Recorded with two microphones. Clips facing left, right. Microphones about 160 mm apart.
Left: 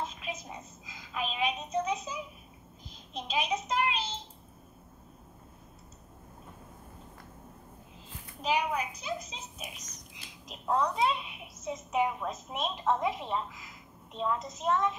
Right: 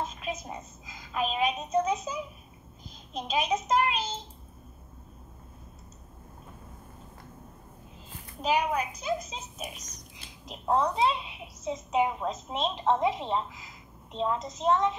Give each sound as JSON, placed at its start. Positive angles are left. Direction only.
{"t": 0.8, "sound": "a sound", "side_deg": -45}
{"t": 3.1, "sound": "a child's voice", "side_deg": -45}
{"t": 8.4, "sound": "a child's voice", "side_deg": -45}
{"t": 10.6, "sound": "a child's voice", "side_deg": -30}